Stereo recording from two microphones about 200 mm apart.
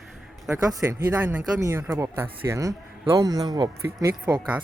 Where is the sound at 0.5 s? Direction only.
15° right (ahead or behind).